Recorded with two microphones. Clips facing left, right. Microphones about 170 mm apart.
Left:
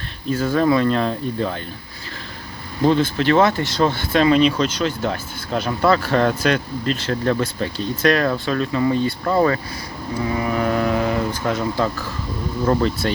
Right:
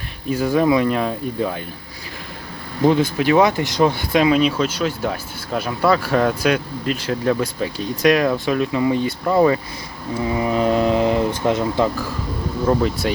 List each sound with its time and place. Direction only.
0.3 s speech: 15° right (ahead or behind)
2.8 s speech: 15° right (ahead or behind)